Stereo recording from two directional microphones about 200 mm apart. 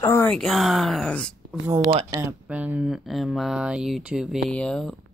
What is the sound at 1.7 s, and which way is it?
Speech, 25° right (ahead or behind).